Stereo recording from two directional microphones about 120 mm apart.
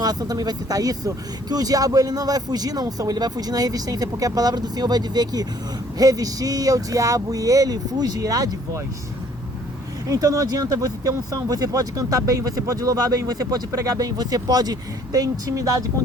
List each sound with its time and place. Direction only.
0.0 s speech: 35° right (ahead or behind)
10.1 s speech: 30° right (ahead or behind)